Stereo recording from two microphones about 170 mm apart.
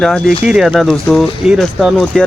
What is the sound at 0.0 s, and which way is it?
Speech, centre (ahead or behind).